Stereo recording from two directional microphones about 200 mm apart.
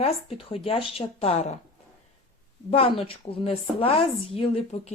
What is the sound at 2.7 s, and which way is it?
Speech, 30° left (ahead or behind).